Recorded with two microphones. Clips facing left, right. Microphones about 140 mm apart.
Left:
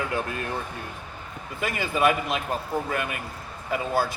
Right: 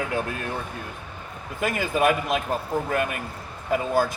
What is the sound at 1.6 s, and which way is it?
Speech, 50° right (ahead or behind).